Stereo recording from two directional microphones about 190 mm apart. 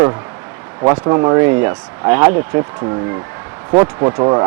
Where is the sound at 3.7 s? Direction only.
25° right (ahead or behind).